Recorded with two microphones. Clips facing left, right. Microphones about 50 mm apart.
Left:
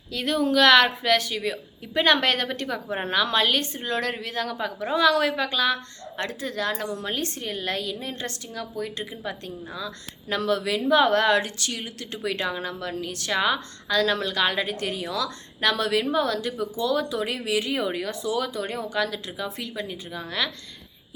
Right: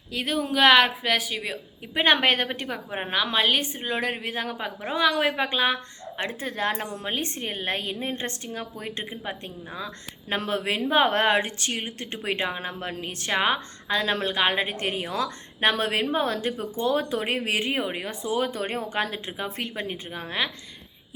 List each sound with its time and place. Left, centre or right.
0.1 s a woman's voice: centre
5.4 s a woman's voice: right